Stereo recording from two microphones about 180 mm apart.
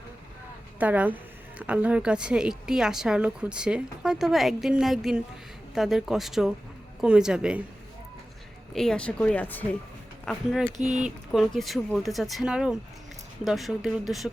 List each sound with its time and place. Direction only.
0.8 s a woman's voice: 10° right (ahead or behind)
8.7 s a woman's voice: 5° left (ahead or behind)
10.8 s speech: 40° right (ahead or behind)
11.0 s a woman's voice: centre (ahead or behind)